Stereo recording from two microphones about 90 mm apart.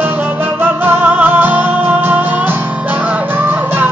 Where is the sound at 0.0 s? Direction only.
20° right (ahead or behind).